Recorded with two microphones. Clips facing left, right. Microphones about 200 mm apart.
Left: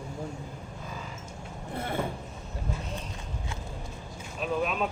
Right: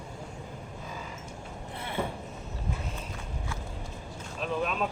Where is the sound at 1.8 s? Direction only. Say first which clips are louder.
Left 2 dB; 45° left (ahead or behind).